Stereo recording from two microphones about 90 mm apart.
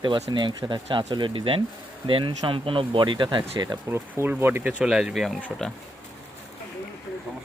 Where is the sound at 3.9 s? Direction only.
25° right (ahead or behind).